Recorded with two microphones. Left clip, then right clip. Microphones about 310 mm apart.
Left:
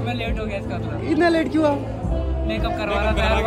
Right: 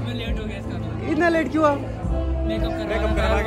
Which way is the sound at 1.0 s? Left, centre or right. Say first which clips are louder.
Left 1 dB; centre.